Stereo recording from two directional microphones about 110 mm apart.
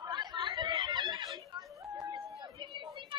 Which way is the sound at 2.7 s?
50° right (ahead or behind).